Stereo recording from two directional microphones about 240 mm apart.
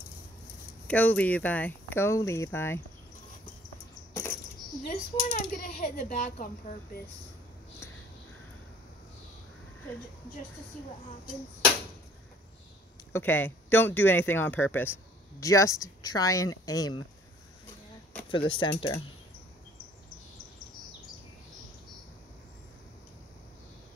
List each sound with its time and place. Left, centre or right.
0.8 s speech: centre
4.8 s speech: left
13.1 s speech: centre
18.3 s speech: centre